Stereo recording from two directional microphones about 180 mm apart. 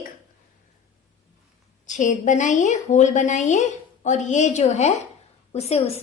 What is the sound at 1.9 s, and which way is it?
A woman's voice, 45° left (ahead or behind).